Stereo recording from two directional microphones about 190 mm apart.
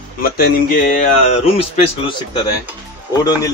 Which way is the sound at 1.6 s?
30° left (ahead or behind).